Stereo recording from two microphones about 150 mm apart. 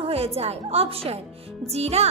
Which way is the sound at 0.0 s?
40° right (ahead or behind).